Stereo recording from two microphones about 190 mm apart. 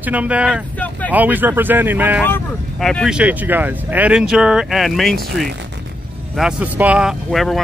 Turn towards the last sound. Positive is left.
turn(degrees=0)  # may be behind; listen again after turning